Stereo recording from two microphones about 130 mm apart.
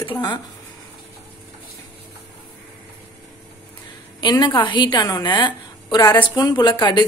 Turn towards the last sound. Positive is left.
turn(degrees=35)  # may be behind; listen again after turning